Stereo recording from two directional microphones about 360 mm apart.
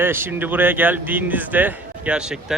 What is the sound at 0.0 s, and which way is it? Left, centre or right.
Speech, centre.